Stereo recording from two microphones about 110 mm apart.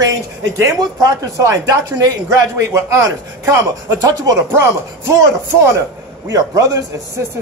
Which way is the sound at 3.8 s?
35° right (ahead or behind).